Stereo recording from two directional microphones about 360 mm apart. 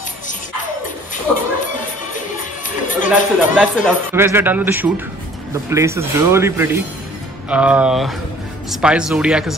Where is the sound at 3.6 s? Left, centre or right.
Centre.